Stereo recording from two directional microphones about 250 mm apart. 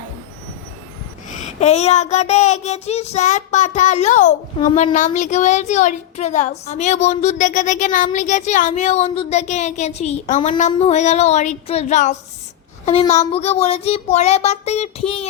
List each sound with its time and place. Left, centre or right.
1.3 s child singing: left